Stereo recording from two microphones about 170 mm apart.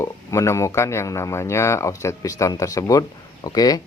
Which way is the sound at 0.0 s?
15° left (ahead or behind).